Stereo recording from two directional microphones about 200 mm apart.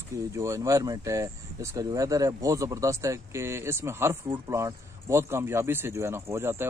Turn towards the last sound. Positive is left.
turn(degrees=-10)  # may be behind; listen again after turning